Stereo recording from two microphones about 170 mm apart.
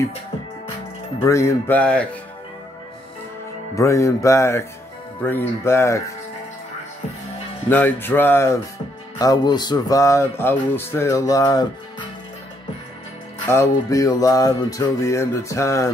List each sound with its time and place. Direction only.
1.2 s music: 15° left (ahead or behind)
3.7 s music: 20° left (ahead or behind)
7.7 s music: 10° left (ahead or behind)
13.5 s music: 20° left (ahead or behind)